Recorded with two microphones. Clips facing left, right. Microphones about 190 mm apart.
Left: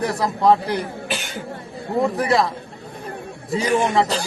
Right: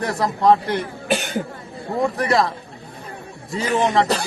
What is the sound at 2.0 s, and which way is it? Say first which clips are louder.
Speech: left 1 dB; centre (ahead or behind).